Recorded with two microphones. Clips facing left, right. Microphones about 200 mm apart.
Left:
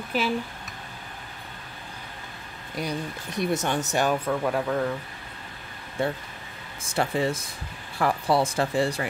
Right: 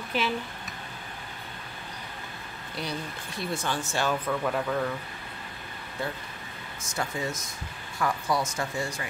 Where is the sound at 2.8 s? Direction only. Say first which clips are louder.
Left 4 dB; 15° left (ahead or behind).